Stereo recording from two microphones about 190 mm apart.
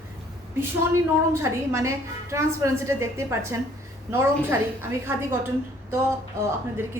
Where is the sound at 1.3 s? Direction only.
15° right (ahead or behind).